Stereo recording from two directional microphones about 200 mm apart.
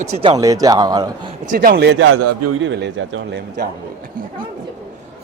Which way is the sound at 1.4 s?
45° right (ahead or behind).